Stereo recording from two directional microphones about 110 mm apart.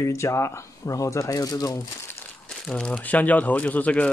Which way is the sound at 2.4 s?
10° left (ahead or behind).